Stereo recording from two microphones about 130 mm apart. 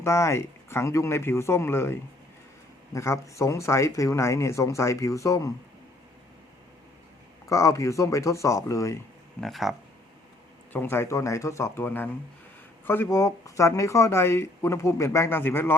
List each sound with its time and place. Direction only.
0.0 s speech: 20° left (ahead or behind)
7.5 s speech: 25° left (ahead or behind)
9.4 s speech: centre (ahead or behind)
10.7 s speech: 15° left (ahead or behind)